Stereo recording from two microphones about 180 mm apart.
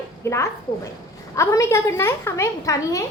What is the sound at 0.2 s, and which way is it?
A child's voice, 15° left (ahead or behind).